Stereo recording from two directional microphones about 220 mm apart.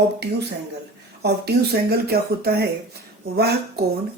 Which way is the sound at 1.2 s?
45° right (ahead or behind).